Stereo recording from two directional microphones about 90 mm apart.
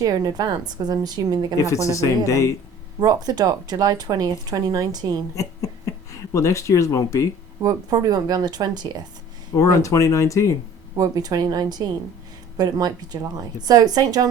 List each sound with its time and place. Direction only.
0.0 s speech: 45° right (ahead or behind)
1.6 s speech: 35° left (ahead or behind)
3.0 s speech: 50° right (ahead or behind)
5.3 s speech: 40° left (ahead or behind)
7.6 s speech: 45° right (ahead or behind)
9.6 s speech: 35° left (ahead or behind)
10.9 s speech: 40° right (ahead or behind)